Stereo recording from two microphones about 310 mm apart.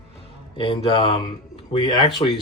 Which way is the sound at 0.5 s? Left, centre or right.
Centre.